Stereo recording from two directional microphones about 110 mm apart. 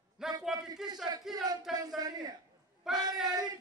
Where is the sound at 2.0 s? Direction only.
35° right (ahead or behind).